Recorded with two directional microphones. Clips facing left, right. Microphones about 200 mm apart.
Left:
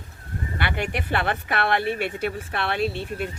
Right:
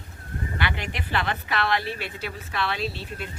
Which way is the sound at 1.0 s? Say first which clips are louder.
Left 3 dB; 55° left (ahead or behind).